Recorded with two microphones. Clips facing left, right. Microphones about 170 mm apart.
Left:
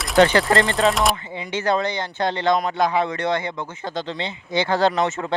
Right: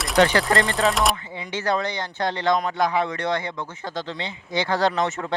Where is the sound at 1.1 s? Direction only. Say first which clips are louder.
Left 3 dB; 25° left (ahead or behind).